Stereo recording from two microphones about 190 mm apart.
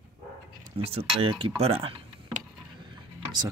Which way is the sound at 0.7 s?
30° right (ahead or behind).